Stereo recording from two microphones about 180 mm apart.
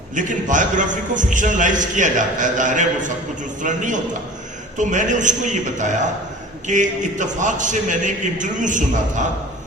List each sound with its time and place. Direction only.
0.1 s a man's voice: 45° right (ahead or behind)